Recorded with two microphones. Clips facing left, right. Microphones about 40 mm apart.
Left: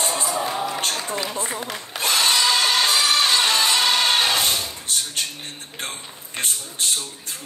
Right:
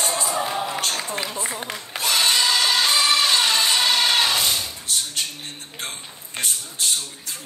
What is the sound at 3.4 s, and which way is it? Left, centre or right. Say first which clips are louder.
Music: left 1 dB; left.